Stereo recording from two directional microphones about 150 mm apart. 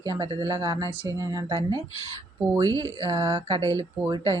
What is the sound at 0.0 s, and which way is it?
Speech, 25° right (ahead or behind).